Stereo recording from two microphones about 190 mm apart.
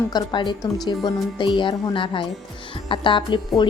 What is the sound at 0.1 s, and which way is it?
A woman's voice, 25° left (ahead or behind).